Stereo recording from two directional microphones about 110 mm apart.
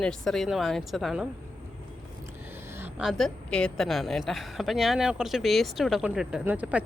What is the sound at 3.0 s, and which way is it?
A woman's voice, centre (ahead or behind).